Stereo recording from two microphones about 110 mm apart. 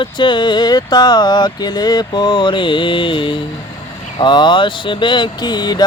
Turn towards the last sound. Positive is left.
turn(degrees=40)  # may be behind; listen again after turning